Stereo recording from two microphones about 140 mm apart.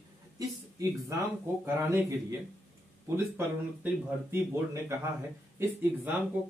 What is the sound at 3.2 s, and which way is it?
Speech, 15° right (ahead or behind).